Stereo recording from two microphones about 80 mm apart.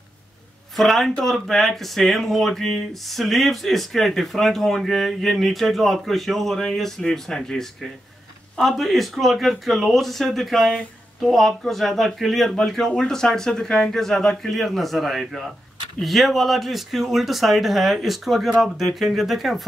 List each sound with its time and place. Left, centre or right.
0.7 s speech: centre